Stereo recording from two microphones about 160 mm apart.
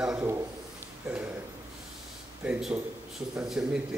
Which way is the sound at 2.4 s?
10° right (ahead or behind).